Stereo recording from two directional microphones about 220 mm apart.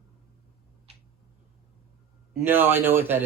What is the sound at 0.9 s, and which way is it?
Tick-tock, 30° right (ahead or behind).